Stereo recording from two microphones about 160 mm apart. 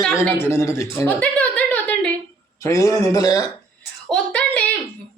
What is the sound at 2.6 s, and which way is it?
Speech, 20° left (ahead or behind).